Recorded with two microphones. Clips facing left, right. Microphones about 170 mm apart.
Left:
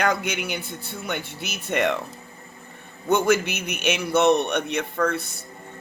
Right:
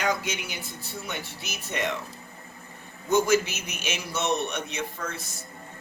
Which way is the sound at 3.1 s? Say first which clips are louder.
Left 2 dB; 60° left (ahead or behind).